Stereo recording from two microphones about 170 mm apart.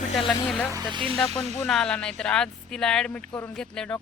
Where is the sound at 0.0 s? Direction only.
40° left (ahead or behind).